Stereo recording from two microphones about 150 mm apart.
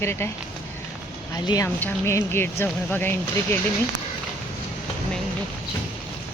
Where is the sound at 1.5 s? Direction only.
25° left (ahead or behind).